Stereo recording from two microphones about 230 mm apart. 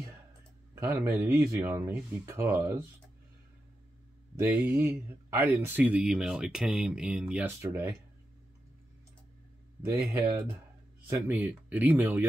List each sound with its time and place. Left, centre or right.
0.7 s speech: centre
4.4 s speech: centre
9.8 s speech: centre
11.1 s speech: centre